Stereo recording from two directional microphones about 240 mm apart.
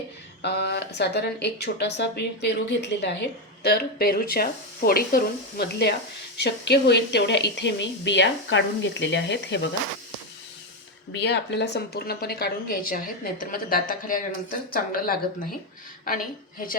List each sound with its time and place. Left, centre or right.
0.4 s a woman's voice: left
11.2 s a woman's voice: left